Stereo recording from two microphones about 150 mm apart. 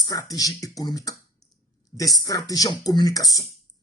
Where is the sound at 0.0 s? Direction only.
25° left (ahead or behind).